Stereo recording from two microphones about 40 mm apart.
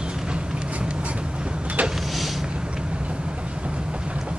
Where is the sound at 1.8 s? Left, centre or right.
Right.